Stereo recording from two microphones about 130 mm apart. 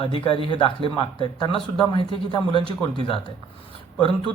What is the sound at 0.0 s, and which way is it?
Speech, 40° left (ahead or behind).